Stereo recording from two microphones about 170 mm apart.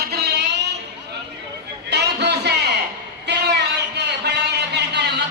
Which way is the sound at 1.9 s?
85° right.